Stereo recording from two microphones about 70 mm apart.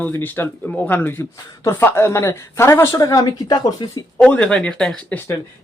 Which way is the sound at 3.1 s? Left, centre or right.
Left.